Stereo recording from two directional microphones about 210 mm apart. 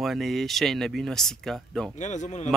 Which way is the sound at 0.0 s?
Centre (ahead or behind).